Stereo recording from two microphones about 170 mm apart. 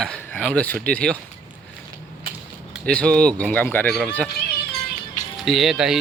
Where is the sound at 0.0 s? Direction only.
5° left (ahead or behind).